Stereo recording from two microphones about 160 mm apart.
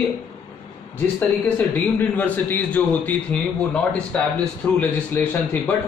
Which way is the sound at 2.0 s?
10° left (ahead or behind).